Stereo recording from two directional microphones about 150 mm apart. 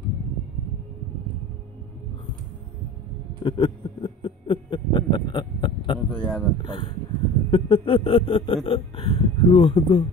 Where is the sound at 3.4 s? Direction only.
30° left (ahead or behind).